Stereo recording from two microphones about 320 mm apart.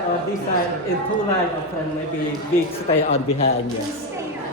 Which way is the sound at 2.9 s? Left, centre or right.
Centre.